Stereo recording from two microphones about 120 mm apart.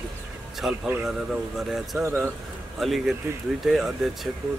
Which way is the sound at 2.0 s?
20° right (ahead or behind).